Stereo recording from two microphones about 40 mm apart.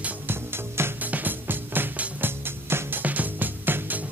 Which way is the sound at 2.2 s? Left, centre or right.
Right.